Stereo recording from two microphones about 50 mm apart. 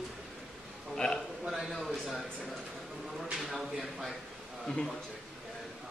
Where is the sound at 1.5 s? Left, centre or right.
Centre.